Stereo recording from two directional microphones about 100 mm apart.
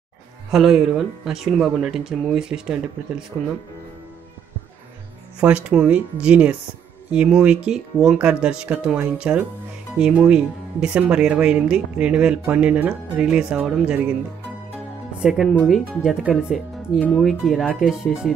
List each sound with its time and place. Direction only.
0.5 s speech: 5° right (ahead or behind)
5.4 s speech: 10° right (ahead or behind)
15.1 s speech: 5° right (ahead or behind)